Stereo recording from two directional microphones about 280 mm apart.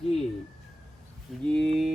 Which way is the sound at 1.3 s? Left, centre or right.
Centre.